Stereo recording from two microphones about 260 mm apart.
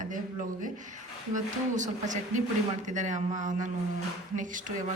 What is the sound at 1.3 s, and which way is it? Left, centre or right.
A woman's voice, right.